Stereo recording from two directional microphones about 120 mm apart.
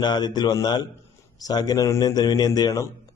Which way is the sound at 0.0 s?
35° left (ahead or behind).